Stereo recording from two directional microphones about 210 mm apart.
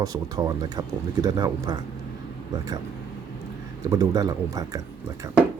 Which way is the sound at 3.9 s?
15° right (ahead or behind).